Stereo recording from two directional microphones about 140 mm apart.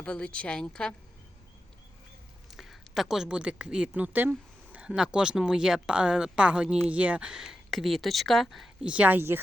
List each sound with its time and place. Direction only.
0.0 s a woman's voice: 10° left (ahead or behind)
2.5 s a woman's voice: centre (ahead or behind)